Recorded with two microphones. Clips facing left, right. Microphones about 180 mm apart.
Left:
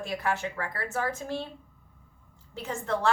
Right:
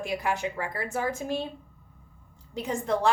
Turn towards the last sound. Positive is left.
turn(degrees=-15)  # may be behind; listen again after turning